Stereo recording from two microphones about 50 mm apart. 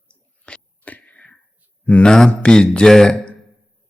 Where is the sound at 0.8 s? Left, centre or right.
Left.